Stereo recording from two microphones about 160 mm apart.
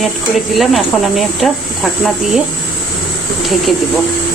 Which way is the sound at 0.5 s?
Centre (ahead or behind).